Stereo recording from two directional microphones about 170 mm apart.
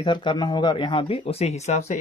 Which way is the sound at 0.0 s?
25° left (ahead or behind).